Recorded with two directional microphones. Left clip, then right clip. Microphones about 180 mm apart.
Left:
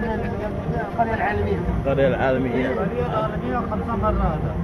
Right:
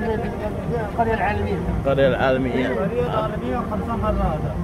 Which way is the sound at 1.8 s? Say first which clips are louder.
Right 2 dB; 20° right (ahead or behind).